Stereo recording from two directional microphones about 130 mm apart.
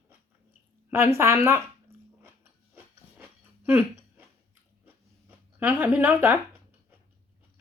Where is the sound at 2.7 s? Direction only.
15° right (ahead or behind).